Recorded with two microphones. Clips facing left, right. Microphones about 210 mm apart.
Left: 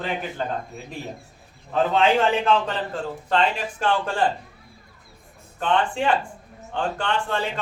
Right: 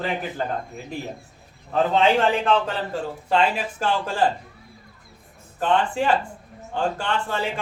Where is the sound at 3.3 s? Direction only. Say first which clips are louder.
Right 1 dB; 5° right (ahead or behind).